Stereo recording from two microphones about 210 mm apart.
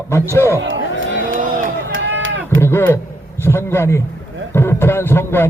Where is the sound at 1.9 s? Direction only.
70° right (ahead or behind).